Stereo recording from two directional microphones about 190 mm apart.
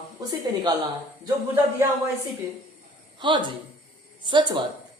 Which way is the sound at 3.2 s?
25° right (ahead or behind).